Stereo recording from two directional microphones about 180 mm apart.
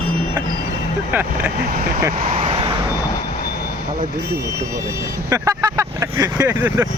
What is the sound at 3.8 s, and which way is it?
Speech, 55° right (ahead or behind).